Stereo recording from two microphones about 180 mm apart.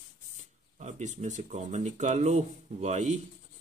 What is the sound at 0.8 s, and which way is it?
Speech, 40° right (ahead or behind).